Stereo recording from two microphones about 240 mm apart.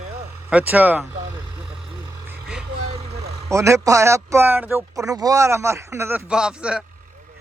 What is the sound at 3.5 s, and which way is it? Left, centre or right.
Speech, centre.